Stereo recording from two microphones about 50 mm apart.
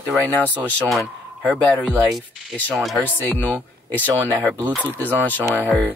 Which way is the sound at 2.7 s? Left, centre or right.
Centre.